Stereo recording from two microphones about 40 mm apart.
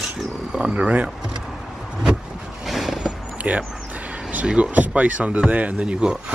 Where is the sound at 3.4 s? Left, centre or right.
Right.